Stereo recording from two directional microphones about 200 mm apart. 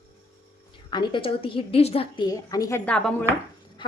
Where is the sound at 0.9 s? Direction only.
25° left (ahead or behind).